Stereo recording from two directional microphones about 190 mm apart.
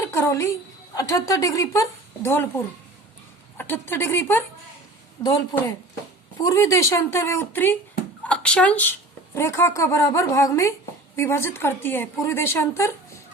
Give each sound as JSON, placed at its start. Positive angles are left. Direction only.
{"t": 0.0, "sound": "a sound", "side_deg": 15}
{"t": 0.9, "sound": "speech", "side_deg": 15}
{"t": 3.6, "sound": "a woman's voice", "side_deg": 10}